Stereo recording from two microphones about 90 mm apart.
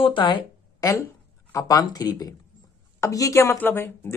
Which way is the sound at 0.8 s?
40° left (ahead or behind).